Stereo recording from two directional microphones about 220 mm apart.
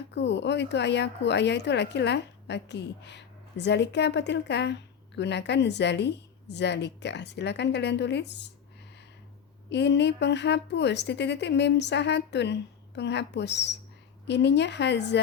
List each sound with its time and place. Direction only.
0.1 s speech: 50° left (ahead or behind)
9.6 s speech: 50° left (ahead or behind)